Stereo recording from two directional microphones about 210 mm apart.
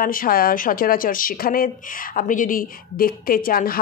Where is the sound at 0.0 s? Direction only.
40° left (ahead or behind).